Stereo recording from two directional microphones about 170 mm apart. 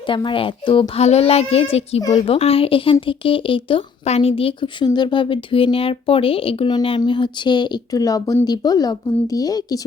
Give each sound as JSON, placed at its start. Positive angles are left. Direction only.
{"t": 0.1, "sound": "speech", "side_deg": 30}